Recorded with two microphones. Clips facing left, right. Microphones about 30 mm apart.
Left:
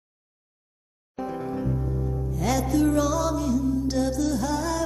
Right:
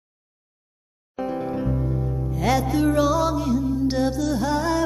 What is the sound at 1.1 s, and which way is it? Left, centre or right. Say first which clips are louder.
Music: right 4 dB; right.